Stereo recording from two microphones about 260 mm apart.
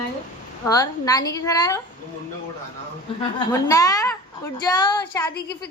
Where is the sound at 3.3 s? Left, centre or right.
Centre.